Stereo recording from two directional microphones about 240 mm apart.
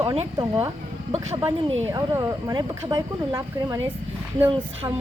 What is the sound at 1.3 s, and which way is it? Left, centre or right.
Speech, centre.